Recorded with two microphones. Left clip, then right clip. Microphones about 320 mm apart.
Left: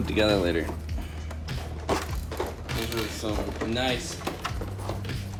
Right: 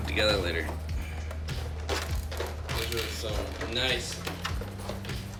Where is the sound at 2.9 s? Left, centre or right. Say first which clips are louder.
Left 2 dB; centre.